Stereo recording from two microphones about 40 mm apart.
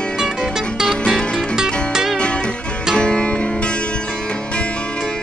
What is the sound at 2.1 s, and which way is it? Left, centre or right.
Music, left.